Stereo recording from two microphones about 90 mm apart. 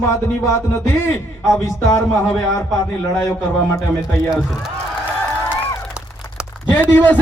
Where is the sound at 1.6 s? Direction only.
35° left (ahead or behind).